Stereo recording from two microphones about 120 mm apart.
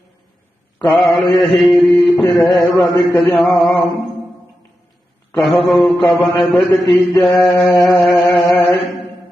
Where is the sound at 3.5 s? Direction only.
30° left (ahead or behind).